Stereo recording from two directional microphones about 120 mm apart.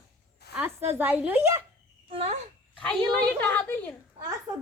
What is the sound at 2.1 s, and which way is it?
Speech, 55° right (ahead or behind).